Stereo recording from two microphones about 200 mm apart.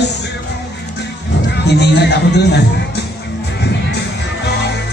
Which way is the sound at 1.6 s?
55° left (ahead or behind).